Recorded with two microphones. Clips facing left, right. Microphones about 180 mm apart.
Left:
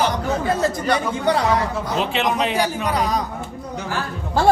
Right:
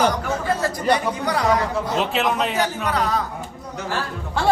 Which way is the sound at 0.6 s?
20° left (ahead or behind).